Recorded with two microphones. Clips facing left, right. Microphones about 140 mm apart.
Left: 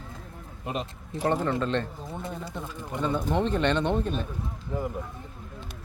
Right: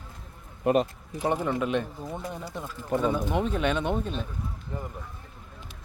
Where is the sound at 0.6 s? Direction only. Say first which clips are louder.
Right 10 dB; 55° right (ahead or behind).